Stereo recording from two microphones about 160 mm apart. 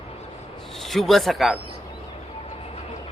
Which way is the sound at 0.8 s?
Centre (ahead or behind).